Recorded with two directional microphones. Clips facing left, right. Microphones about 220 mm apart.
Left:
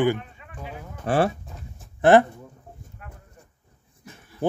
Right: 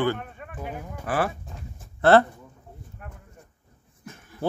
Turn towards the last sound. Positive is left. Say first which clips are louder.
# left 3 dB
turn(degrees=15)  # may be behind; listen again after turning